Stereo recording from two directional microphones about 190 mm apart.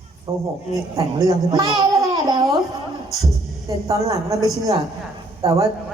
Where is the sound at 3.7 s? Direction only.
15° right (ahead or behind).